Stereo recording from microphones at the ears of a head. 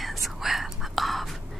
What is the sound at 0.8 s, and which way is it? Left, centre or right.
Whispering, centre.